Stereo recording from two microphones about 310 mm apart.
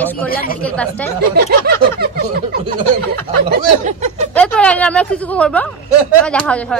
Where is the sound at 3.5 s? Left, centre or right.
Right.